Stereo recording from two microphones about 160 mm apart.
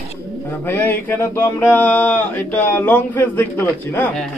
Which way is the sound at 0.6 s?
15° left (ahead or behind).